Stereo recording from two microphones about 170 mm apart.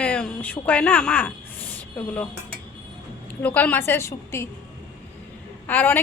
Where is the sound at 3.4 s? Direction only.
10° left (ahead or behind).